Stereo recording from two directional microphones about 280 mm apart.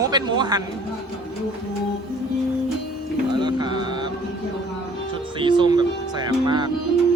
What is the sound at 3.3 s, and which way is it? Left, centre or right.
Music, centre.